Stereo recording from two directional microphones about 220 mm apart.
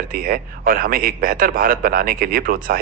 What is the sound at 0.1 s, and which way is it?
A man's voice, 40° right (ahead or behind).